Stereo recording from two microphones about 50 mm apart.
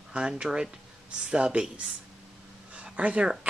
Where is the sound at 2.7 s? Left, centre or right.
Right.